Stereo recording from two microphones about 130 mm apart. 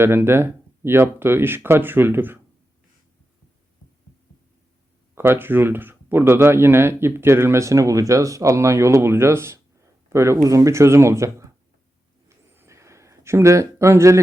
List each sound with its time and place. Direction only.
0.0 s speech: 20° right (ahead or behind)
5.1 s speech: 15° right (ahead or behind)
12.3 s a sound: 20° right (ahead or behind)